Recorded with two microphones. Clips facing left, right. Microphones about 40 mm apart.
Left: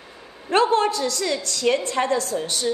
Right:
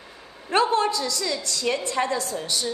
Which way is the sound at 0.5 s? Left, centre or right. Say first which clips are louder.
Left 2 dB; left.